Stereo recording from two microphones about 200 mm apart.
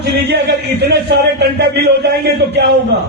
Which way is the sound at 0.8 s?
55° right (ahead or behind).